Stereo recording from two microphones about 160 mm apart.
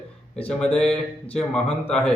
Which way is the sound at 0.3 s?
5° left (ahead or behind).